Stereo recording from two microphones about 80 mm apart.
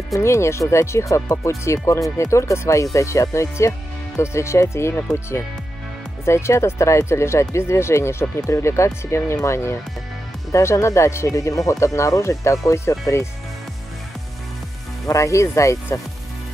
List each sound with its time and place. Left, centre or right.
0.1 s speech: left
6.2 s speech: left
15.0 s speech: left